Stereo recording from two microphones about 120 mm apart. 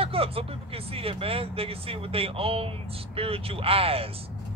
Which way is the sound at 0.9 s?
50° right (ahead or behind).